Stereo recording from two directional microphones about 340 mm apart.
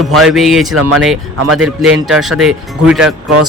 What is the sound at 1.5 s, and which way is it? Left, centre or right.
A man's voice, centre.